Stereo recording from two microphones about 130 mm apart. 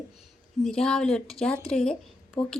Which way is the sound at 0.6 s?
5° left (ahead or behind).